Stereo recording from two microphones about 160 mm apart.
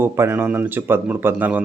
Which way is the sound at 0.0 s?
15° right (ahead or behind).